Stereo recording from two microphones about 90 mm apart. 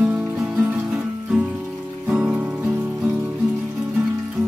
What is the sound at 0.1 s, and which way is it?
Music, 20° right (ahead or behind).